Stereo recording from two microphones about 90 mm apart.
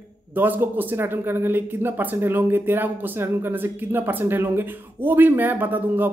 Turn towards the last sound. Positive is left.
turn(degrees=-20)  # may be behind; listen again after turning